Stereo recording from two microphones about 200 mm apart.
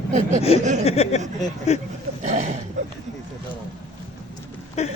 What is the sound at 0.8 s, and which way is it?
Speech, 30° left (ahead or behind).